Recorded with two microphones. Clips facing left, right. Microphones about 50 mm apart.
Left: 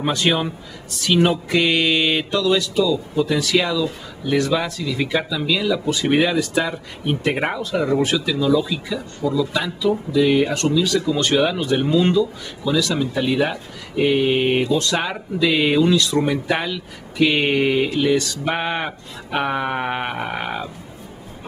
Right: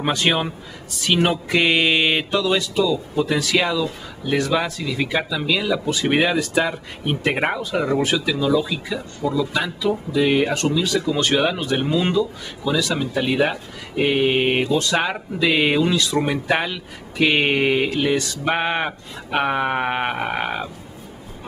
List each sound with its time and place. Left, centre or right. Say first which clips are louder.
0.0 s speech: even; centre